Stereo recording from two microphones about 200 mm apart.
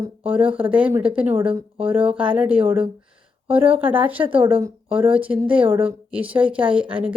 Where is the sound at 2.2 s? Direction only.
5° right (ahead or behind).